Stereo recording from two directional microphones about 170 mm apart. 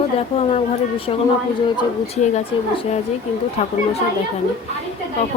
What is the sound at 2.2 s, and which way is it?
Speech, 40° left (ahead or behind).